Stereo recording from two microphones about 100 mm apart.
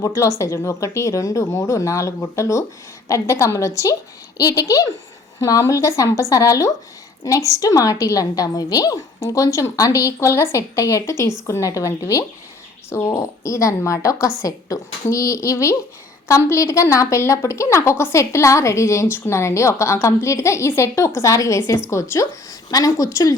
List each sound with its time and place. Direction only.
0.0 s a woman's voice: 30° left (ahead or behind)